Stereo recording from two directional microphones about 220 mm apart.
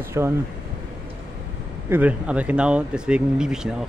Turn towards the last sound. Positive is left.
turn(degrees=-5)  # may be behind; listen again after turning